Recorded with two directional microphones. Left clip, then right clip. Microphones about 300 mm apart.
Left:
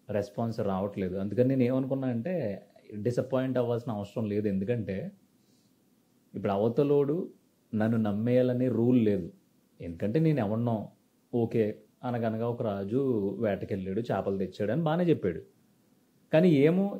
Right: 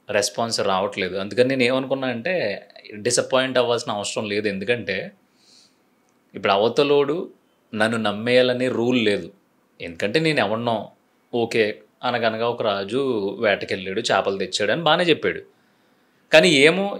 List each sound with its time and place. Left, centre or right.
0.0 s speech: centre
6.3 s speech: centre
10.8 s a sound: right
11.4 s speech: centre